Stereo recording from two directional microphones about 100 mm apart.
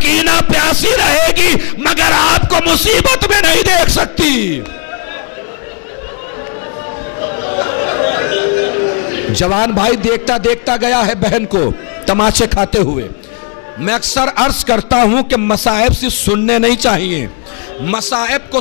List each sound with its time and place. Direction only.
0.2 s music: 15° left (ahead or behind)
7.2 s a sound: 15° left (ahead or behind)
12.1 s a man's voice: 10° left (ahead or behind)